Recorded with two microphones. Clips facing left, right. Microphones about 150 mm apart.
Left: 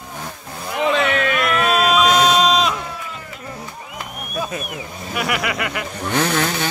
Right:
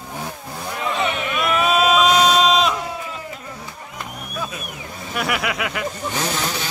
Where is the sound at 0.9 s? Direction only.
90° left.